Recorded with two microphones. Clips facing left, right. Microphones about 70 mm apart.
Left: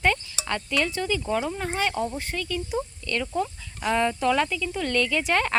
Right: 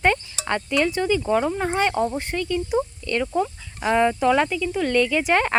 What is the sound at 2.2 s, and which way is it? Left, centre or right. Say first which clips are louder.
Speech: right 5 dB; right.